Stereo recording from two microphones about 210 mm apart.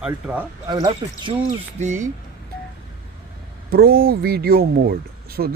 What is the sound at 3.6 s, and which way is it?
Speech, 50° right (ahead or behind).